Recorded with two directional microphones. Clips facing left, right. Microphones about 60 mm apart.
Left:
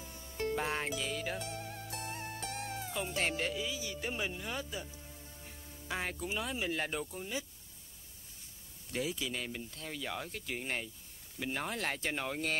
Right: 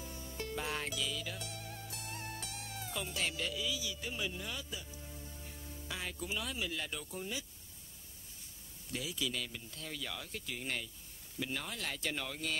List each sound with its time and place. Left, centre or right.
0.4 s speech: left
1.0 s music: left
2.1 s music: left
2.4 s music: left
2.8 s music: left
3.2 s speech: left
4.3 s speech: left
4.6 s speech: left
5.0 s music: centre
5.9 s speech: left
8.9 s speech: left